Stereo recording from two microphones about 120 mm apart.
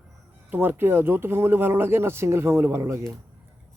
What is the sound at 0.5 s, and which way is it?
Speech, 15° right (ahead or behind).